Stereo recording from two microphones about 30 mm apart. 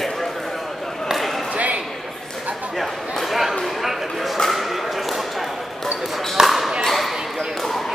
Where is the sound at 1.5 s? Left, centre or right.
Right.